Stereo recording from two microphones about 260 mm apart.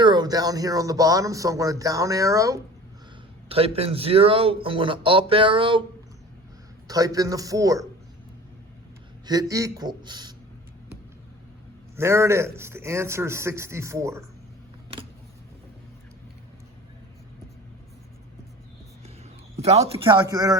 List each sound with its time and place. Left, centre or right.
0.0 s speech: centre
6.8 s speech: centre
9.2 s speech: centre
11.9 s speech: centre
14.9 s a sound: centre
19.5 s a man's voice: right